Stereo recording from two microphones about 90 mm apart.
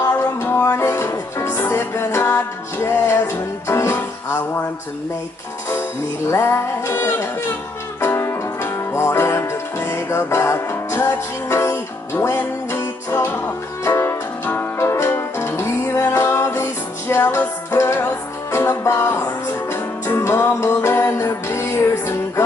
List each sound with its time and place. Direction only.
0.0 s music: 30° left (ahead or behind)
6.3 s music: 30° left (ahead or behind)